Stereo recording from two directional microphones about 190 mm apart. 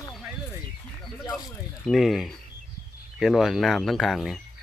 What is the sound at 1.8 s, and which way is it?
Speech, centre (ahead or behind).